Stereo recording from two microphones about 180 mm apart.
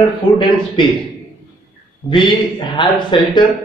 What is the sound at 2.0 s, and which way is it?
A man's voice, 25° left (ahead or behind).